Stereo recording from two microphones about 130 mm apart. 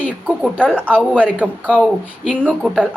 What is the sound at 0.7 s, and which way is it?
Speech, 10° right (ahead or behind).